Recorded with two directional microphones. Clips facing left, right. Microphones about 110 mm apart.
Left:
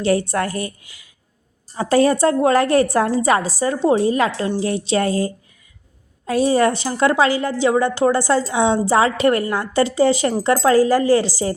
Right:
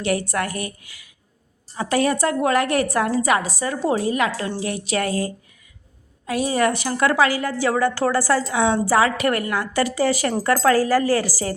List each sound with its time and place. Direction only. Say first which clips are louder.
0.0 s a woman's voice: left 4 dB; 30° left (ahead or behind)